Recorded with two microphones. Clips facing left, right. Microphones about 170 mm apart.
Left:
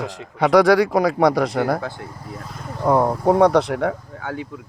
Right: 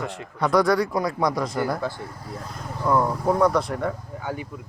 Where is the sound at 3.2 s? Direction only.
75° left (ahead or behind).